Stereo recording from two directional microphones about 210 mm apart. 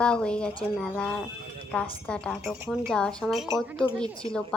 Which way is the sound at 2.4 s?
5° right (ahead or behind).